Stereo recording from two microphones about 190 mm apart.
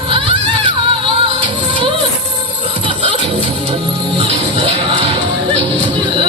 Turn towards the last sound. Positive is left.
turn(degrees=-25)  # may be behind; listen again after turning